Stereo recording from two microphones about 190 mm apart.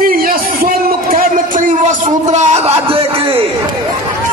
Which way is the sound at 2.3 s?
35° right (ahead or behind).